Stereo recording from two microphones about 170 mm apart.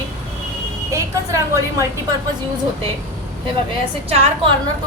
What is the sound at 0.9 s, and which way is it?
Speech, 20° right (ahead or behind).